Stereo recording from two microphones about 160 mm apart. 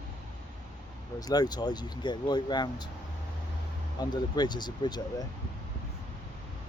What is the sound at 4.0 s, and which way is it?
Speech, 25° left (ahead or behind).